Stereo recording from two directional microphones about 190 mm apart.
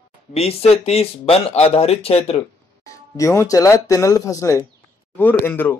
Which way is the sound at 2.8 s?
15° left (ahead or behind).